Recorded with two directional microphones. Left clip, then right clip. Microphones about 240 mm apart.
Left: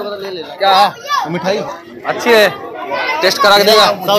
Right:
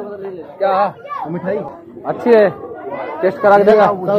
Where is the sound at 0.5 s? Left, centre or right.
Centre.